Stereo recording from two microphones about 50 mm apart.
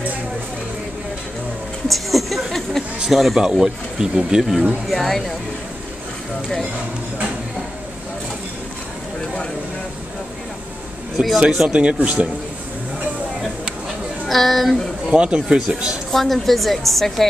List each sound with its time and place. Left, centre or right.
1.9 s a sound: centre
3.3 s a woman's voice: centre
11.1 s a woman's voice: centre
11.7 s speech: right
14.2 s a woman's voice: centre
15.0 s speech: right
16.1 s a woman's voice: centre